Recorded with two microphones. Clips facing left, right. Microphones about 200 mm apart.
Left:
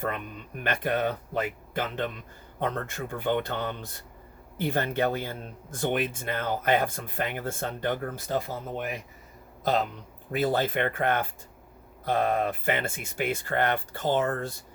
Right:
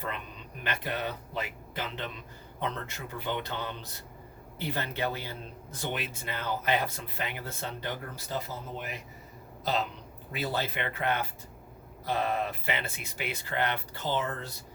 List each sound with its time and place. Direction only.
0.0 s speech: 50° left (ahead or behind)
10.3 s speech: 50° left (ahead or behind)